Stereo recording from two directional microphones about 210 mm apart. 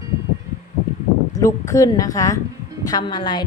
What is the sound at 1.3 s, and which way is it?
A woman's voice, 15° left (ahead or behind).